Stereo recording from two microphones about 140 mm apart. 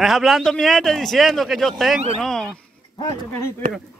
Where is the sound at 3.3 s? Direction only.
15° left (ahead or behind).